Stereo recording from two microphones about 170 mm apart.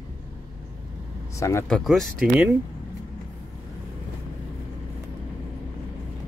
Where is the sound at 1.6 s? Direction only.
5° left (ahead or behind).